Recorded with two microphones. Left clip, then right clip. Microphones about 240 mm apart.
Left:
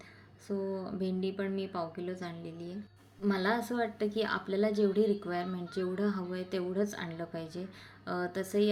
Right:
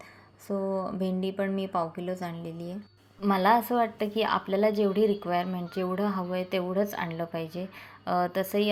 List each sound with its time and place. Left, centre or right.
0.4 s a woman's voice: centre